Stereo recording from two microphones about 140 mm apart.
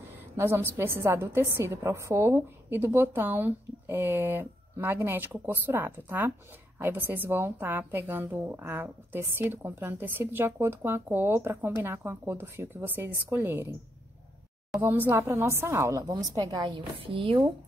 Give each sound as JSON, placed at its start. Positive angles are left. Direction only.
{"t": 0.4, "sound": "a woman's voice", "side_deg": -15}
{"t": 14.8, "sound": "a woman's voice", "side_deg": -15}